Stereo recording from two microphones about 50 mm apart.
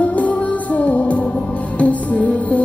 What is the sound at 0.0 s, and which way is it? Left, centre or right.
Music, left.